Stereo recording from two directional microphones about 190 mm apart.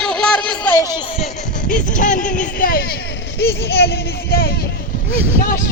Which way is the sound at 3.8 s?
55° left (ahead or behind).